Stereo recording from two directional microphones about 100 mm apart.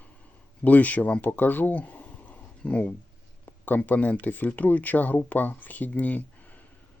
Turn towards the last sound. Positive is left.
turn(degrees=15)  # may be behind; listen again after turning